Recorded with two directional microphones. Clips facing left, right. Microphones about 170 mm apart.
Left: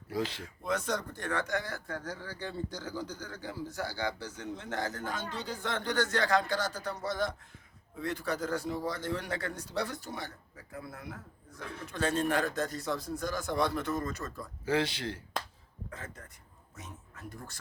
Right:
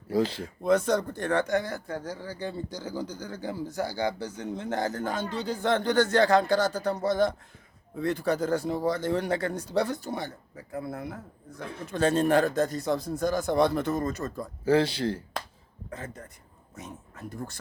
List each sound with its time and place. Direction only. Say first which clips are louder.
0.1 s a man's voice: right 8 dB; 35° right (ahead or behind); by 4.9 s 15° right (ahead or behind)
4.9 s speech: right 7 dB; 30° right (ahead or behind)
14.3 s speech: right 8 dB; 35° right (ahead or behind)